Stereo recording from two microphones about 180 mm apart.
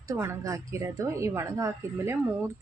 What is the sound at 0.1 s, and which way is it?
Speech, 15° right (ahead or behind).